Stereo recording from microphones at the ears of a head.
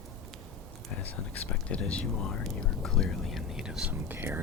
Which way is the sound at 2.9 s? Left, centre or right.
Centre.